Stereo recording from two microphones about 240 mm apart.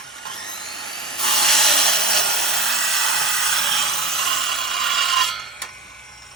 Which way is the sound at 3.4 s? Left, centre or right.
Right.